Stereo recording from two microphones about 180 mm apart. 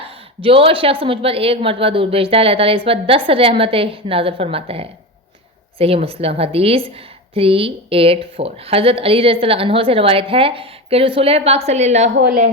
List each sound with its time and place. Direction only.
0.0 s a woman's voice: 30° right (ahead or behind)